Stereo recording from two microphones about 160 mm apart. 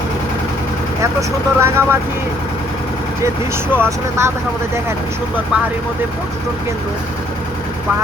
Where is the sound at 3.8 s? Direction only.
15° right (ahead or behind).